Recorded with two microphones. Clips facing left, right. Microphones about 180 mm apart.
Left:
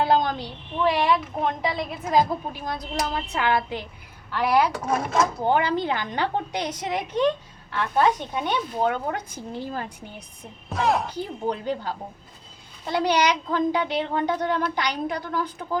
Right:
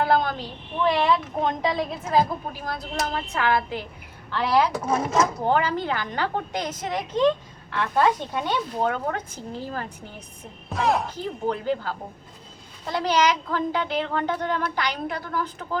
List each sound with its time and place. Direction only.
0.0 s a woman's voice: 15° left (ahead or behind)
8.3 s a woman's voice: 10° left (ahead or behind)
10.7 s speech: centre (ahead or behind)
11.4 s a woman's voice: 15° left (ahead or behind)